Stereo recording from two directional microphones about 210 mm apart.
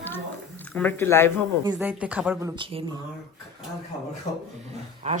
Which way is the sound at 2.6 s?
25° right (ahead or behind).